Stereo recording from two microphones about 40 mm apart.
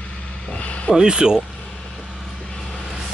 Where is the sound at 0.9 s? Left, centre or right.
Right.